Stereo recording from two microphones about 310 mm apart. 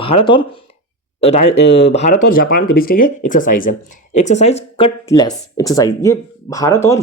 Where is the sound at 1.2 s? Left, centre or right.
Centre.